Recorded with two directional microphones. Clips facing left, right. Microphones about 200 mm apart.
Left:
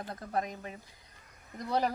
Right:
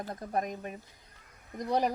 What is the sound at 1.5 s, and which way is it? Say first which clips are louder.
Speech: right 2 dB; 15° right (ahead or behind).